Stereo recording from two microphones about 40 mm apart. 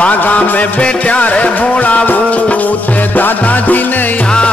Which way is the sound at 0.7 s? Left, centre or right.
Left.